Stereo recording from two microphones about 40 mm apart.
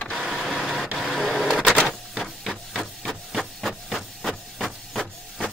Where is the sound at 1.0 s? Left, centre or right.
Centre.